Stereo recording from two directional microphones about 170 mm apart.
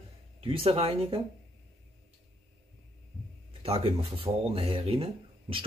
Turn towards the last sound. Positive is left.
turn(degrees=-30)  # may be behind; listen again after turning